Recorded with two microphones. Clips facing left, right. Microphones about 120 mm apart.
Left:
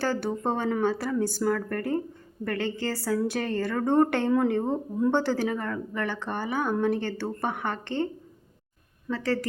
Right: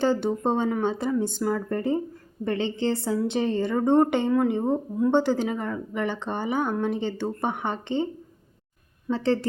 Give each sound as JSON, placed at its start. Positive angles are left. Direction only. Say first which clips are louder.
{"t": 0.0, "sound": "speech", "louder": "right 4 dB", "side_deg": -20}
{"t": 9.0, "sound": "speech", "louder": "right 4 dB", "side_deg": -30}